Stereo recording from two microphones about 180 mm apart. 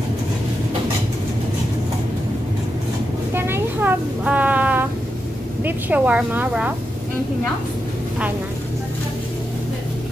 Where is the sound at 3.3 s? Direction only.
10° right (ahead or behind).